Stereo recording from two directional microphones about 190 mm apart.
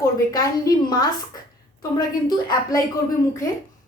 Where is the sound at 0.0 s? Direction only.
15° left (ahead or behind).